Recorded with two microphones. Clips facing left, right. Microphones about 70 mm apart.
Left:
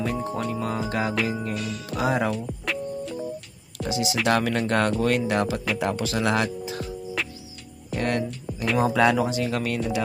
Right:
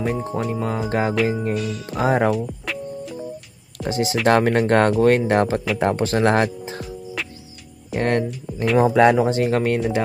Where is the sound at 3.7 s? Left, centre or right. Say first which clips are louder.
Right 4 dB; right.